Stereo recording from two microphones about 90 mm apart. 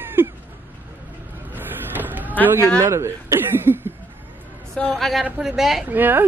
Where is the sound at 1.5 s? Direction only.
20° right (ahead or behind).